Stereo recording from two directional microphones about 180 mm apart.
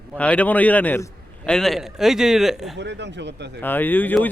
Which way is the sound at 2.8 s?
75° right (ahead or behind).